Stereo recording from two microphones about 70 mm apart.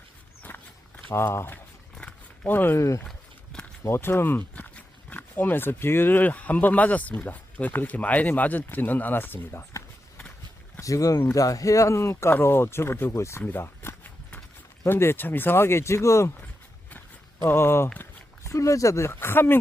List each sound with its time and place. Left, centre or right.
0.4 s walk: left
1.1 s speech: left
2.0 s a sound: centre
2.5 s speech: left
2.7 s speech: left
3.8 s speech: left
9.5 s speech: left
13.4 s a sound: left
14.8 s speech: left
17.4 s speech: left
17.9 s a sound: left
18.5 s speech: left